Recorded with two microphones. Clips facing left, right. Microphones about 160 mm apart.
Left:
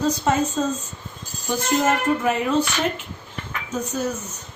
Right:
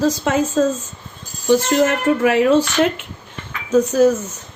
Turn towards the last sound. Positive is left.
turn(degrees=-90)